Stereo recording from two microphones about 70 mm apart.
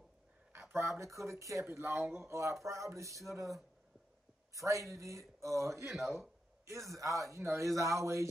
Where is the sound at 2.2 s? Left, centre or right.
Right.